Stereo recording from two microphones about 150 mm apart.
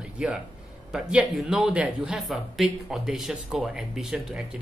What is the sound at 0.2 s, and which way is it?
Speech, 5° right (ahead or behind).